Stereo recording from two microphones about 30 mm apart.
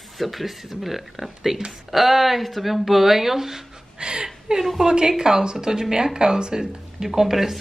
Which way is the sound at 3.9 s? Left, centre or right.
Right.